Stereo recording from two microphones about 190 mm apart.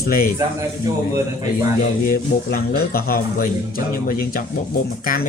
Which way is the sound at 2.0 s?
50° left (ahead or behind).